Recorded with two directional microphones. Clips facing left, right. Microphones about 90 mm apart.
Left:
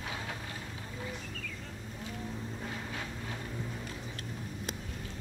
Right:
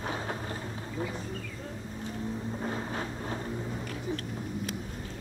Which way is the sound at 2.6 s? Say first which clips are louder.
Right 6 dB; 35° right (ahead or behind).